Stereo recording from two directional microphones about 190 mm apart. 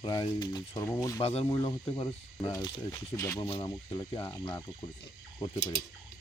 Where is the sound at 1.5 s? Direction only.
20° left (ahead or behind).